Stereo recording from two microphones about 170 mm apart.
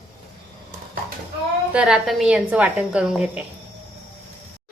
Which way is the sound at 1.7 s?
5° right (ahead or behind).